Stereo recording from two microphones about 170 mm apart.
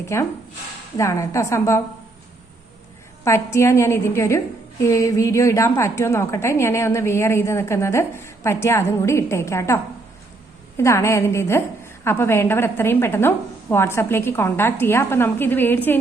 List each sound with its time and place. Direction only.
0.0 s a woman's voice: 15° left (ahead or behind)
3.2 s a woman's voice: 15° left (ahead or behind)